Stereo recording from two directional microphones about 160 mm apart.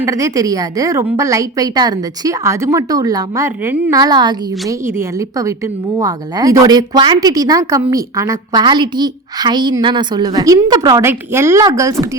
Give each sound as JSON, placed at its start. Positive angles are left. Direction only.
{"t": 0.0, "sound": "a woman's voice", "side_deg": -20}
{"t": 8.6, "sound": "a woman's voice", "side_deg": -30}